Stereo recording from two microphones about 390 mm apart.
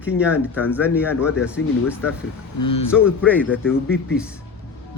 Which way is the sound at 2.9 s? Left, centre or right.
Centre.